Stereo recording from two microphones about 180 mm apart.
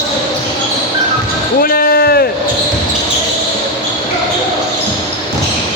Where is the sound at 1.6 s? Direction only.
55° left (ahead or behind).